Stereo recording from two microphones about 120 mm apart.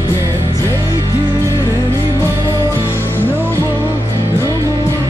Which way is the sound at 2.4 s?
25° right (ahead or behind).